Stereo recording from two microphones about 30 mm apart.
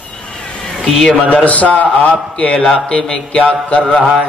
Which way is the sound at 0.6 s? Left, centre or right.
Centre.